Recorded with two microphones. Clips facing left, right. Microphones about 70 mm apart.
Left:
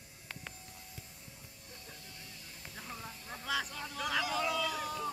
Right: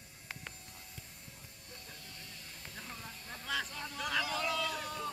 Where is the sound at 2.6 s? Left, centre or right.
Centre.